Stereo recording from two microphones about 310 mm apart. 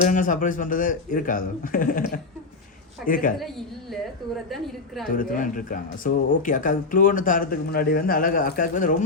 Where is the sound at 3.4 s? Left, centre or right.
Centre.